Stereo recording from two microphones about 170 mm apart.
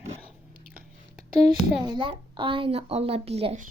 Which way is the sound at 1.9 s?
30° right (ahead or behind).